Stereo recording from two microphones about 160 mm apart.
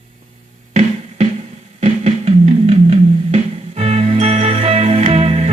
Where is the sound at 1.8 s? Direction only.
45° right (ahead or behind).